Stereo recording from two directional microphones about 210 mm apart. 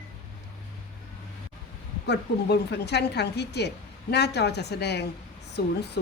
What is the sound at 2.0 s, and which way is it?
Speech, 55° left (ahead or behind).